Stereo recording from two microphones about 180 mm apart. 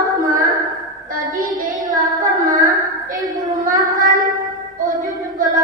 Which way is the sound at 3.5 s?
20° right (ahead or behind).